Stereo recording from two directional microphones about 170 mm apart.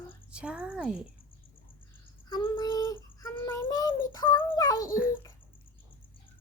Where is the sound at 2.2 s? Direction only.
25° left (ahead or behind).